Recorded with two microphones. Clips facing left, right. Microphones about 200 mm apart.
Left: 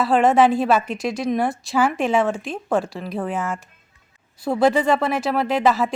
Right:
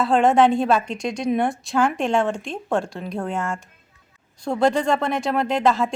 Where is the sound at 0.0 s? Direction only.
Centre (ahead or behind).